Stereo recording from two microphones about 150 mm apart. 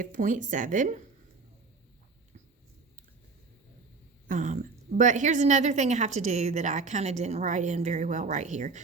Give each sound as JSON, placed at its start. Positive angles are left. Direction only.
{"t": 0.0, "sound": "speech", "side_deg": -60}
{"t": 4.3, "sound": "a woman's voice", "side_deg": -55}